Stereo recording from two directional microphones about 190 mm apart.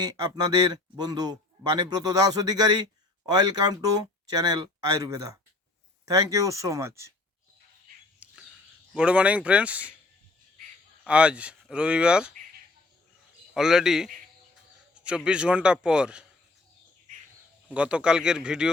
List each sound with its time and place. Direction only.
0.0 s speech: 20° right (ahead or behind)
8.2 s a sound: 5° right (ahead or behind)
9.0 s speech: 5° right (ahead or behind)
11.0 s speech: 5° right (ahead or behind)
13.5 s speech: 5° right (ahead or behind)
17.7 s speech: 5° right (ahead or behind)